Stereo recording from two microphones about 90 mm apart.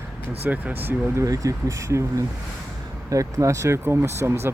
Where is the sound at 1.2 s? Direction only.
40° right (ahead or behind).